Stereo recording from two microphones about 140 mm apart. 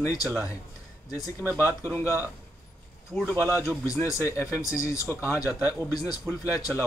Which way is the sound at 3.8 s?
20° left (ahead or behind).